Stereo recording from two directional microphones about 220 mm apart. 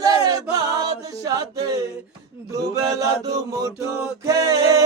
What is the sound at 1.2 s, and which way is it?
Chant, 15° right (ahead or behind).